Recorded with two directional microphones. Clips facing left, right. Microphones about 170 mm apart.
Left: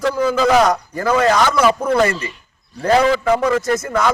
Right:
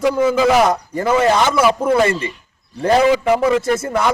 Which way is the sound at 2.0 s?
25° right (ahead or behind).